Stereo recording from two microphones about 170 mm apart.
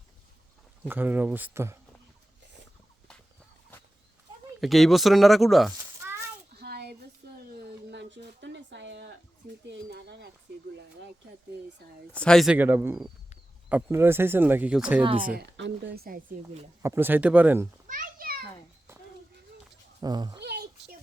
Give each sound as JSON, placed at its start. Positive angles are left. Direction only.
{"t": 0.9, "sound": "speech", "side_deg": -10}
{"t": 4.6, "sound": "speech", "side_deg": 0}
{"t": 6.5, "sound": "a sound", "side_deg": -70}
{"t": 9.6, "sound": "speech", "side_deg": -85}
{"t": 12.1, "sound": "speech", "side_deg": 5}
{"t": 12.5, "sound": "speech", "side_deg": -10}
{"t": 15.4, "sound": "speech", "side_deg": -85}
{"t": 16.8, "sound": "speech", "side_deg": -15}
{"t": 17.8, "sound": "children playing", "side_deg": -55}
{"t": 20.0, "sound": "speech", "side_deg": -25}
{"t": 20.4, "sound": "a sound", "side_deg": -75}